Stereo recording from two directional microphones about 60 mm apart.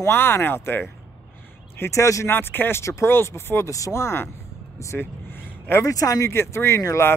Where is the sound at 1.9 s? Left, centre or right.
Left.